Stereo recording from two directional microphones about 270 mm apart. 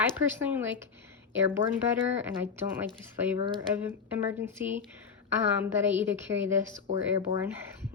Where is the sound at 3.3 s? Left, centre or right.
Centre.